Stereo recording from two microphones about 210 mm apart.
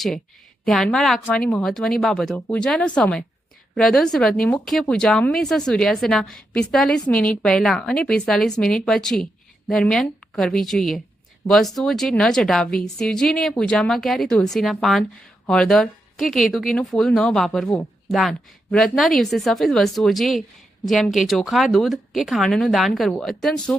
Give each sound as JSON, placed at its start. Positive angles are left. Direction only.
{"t": 0.6, "sound": "a woman's voice", "side_deg": 0}